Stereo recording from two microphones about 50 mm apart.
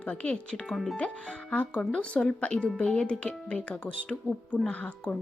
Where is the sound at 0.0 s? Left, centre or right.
Left.